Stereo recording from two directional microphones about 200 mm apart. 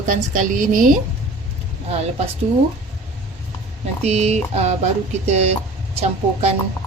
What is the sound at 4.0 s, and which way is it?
Speech, 35° right (ahead or behind).